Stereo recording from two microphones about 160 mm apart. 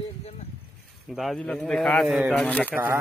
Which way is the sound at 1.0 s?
Centre (ahead or behind).